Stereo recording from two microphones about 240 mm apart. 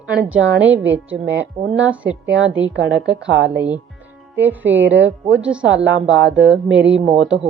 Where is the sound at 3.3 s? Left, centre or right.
Right.